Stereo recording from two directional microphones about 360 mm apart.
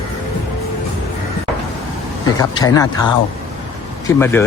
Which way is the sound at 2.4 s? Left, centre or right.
Centre.